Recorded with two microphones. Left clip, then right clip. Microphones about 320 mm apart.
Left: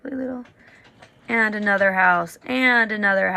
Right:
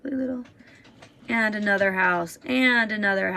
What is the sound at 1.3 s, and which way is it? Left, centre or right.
Speech, right.